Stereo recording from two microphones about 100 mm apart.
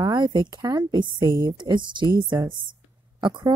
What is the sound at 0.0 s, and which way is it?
A woman's voice, 45° right (ahead or behind).